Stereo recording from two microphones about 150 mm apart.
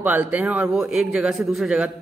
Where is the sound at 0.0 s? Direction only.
10° right (ahead or behind).